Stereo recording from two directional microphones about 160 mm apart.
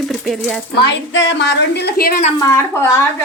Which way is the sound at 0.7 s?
90° left.